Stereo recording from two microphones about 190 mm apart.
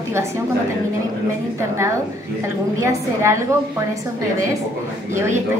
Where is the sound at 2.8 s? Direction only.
15° right (ahead or behind).